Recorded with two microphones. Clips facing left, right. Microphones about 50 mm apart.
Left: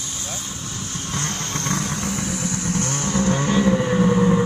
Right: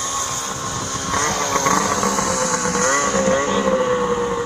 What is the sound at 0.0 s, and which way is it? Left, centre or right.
Vehicle, right.